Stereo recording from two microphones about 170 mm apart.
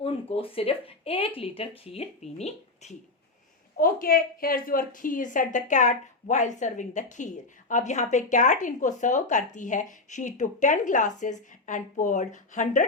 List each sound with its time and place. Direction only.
0.0 s speech: 35° left (ahead or behind)
3.8 s a woman's voice: 55° left (ahead or behind)